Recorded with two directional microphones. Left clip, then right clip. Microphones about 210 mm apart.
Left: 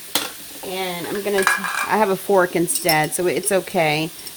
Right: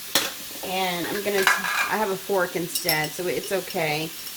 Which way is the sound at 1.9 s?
50° left (ahead or behind).